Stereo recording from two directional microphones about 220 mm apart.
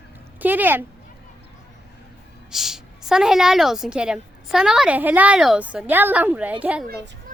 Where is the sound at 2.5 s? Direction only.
Centre (ahead or behind).